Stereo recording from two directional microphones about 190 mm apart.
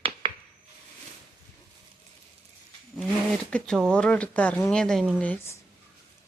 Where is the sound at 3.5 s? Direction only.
5° left (ahead or behind).